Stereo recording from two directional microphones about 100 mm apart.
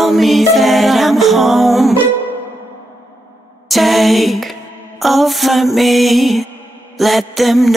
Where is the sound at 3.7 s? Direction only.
Centre (ahead or behind).